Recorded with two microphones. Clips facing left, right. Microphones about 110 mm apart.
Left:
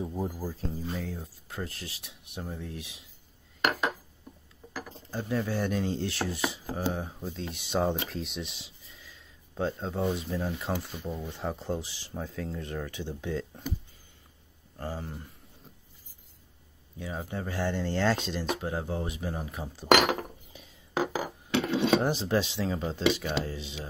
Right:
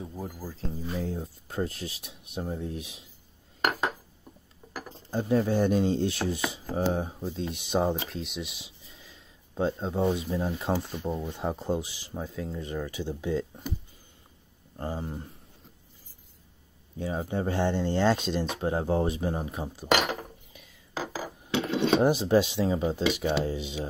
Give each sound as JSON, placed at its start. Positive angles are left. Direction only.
{"t": 0.0, "sound": "speech", "side_deg": 20}
{"t": 0.6, "sound": "speech", "side_deg": 0}
{"t": 0.9, "sound": "speech", "side_deg": -30}
{"t": 5.3, "sound": "speech", "side_deg": -30}
{"t": 7.9, "sound": "speech", "side_deg": 0}
{"t": 8.8, "sound": "a sound", "side_deg": -25}
{"t": 10.6, "sound": "speech", "side_deg": -20}
{"t": 14.8, "sound": "speech", "side_deg": -20}
{"t": 17.0, "sound": "speech", "side_deg": -30}
{"t": 20.9, "sound": "a sound", "side_deg": 65}
{"t": 21.6, "sound": "speech", "side_deg": -15}